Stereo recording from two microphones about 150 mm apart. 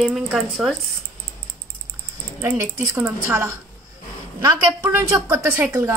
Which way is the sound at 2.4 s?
20° right (ahead or behind).